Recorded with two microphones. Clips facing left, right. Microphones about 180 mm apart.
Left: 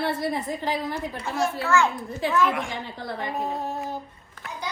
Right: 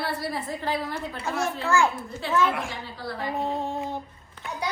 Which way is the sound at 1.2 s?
35° right (ahead or behind).